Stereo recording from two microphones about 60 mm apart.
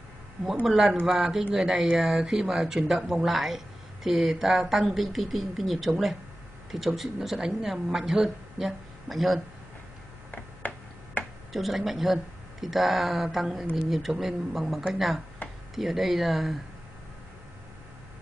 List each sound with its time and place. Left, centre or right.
0.7 s speech: centre
10.6 s tick-tock: left
11.2 s a sound: left
11.5 s speech: centre